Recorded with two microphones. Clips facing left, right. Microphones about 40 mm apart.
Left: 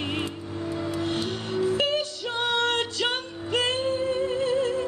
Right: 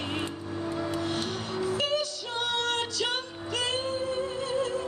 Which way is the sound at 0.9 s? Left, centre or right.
Left.